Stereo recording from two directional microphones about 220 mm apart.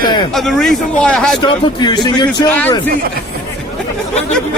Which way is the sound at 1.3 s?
20° left (ahead or behind).